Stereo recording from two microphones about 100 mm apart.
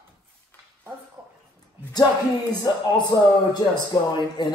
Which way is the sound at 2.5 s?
40° left (ahead or behind).